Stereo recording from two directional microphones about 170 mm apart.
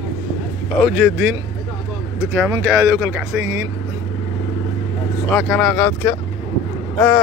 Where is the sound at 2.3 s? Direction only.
15° right (ahead or behind).